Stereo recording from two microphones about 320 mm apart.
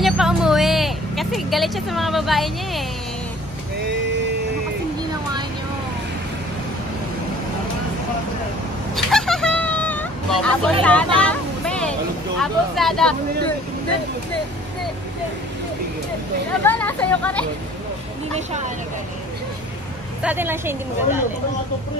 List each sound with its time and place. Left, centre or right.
0.0 s vehicle: centre
8.9 s vehicle: centre
11.1 s a sound: centre
12.4 s speech: centre
16.6 s speech: centre
18.3 s speech: right
20.2 s a woman's voice: centre